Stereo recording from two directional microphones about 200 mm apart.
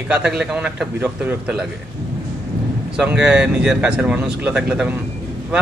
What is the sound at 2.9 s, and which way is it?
A man's voice, 5° right (ahead or behind).